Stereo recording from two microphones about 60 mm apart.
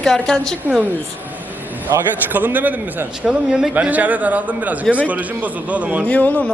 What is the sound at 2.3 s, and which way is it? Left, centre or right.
Speech, right.